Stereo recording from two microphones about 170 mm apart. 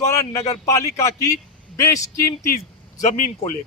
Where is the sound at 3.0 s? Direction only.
45° left (ahead or behind).